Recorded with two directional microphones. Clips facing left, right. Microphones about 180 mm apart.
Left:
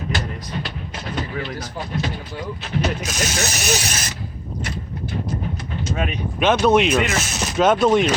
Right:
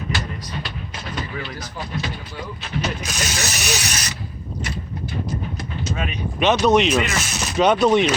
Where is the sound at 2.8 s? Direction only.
50° left (ahead or behind).